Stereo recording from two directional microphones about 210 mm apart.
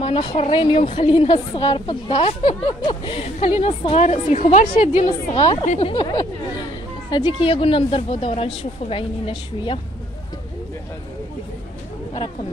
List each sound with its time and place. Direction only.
0.0 s a woman's voice: 25° left (ahead or behind)